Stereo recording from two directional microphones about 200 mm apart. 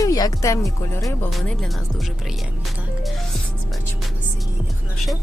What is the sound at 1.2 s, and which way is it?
Speech, centre (ahead or behind).